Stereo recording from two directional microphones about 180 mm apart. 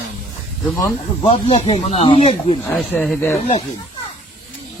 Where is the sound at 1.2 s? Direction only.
30° left (ahead or behind).